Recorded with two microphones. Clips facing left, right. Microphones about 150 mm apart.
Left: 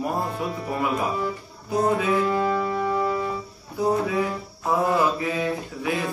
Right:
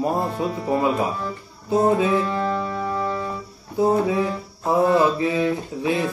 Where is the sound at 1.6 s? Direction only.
25° right (ahead or behind).